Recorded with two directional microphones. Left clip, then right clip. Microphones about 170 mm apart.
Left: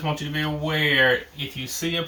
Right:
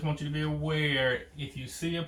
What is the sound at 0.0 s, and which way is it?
Speech, 30° left (ahead or behind).